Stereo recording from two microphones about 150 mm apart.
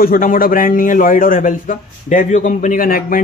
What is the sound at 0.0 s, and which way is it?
A man's voice, 70° left (ahead or behind).